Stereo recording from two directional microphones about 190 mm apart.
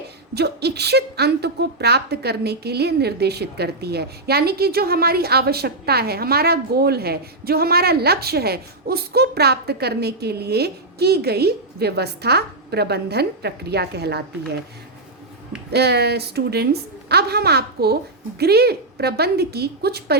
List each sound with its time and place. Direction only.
0.3 s a woman's voice: 60° right (ahead or behind)
15.7 s a woman's voice: 60° right (ahead or behind)